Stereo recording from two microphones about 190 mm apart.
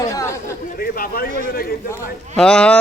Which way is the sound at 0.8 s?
50° left (ahead or behind).